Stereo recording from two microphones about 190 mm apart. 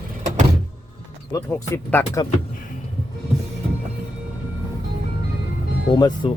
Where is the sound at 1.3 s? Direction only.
15° left (ahead or behind).